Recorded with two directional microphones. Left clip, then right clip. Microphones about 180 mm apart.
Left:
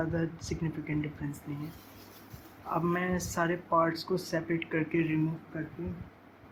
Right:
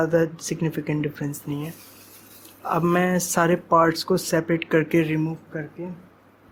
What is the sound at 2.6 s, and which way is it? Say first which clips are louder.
Speech: right 10 dB; 55° right (ahead or behind).